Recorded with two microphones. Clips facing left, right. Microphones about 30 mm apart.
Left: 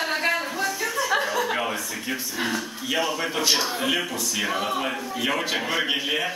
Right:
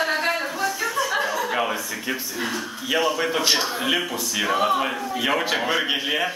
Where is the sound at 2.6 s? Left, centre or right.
Centre.